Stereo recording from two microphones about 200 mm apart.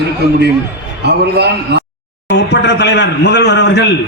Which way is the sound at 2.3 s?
60° left (ahead or behind).